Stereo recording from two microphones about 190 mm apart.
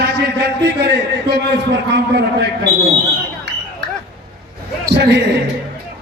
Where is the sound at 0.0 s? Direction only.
60° right (ahead or behind).